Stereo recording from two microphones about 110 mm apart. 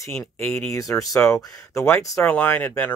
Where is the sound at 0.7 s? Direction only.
30° left (ahead or behind).